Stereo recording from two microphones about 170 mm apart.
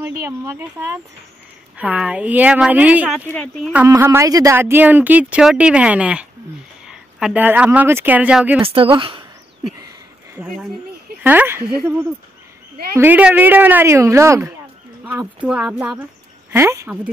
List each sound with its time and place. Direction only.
0.5 s speech: 15° right (ahead or behind)
3.3 s speech: 5° left (ahead or behind)
3.7 s speech: 15° right (ahead or behind)
8.5 s a woman's voice: 30° right (ahead or behind)
11.2 s speech: 10° right (ahead or behind)
12.9 s speech: 10° right (ahead or behind)
15.4 s speech: 5° right (ahead or behind)